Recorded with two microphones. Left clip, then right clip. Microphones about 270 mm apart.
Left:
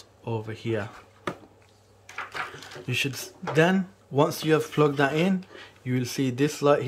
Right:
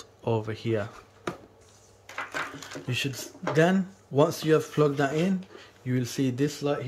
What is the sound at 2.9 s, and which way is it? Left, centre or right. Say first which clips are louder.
Speech: left 3 dB; centre.